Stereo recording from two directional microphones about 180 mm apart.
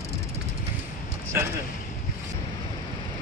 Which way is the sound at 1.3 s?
15° right (ahead or behind).